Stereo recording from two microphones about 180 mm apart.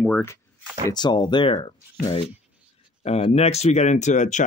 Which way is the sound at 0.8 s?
25° left (ahead or behind).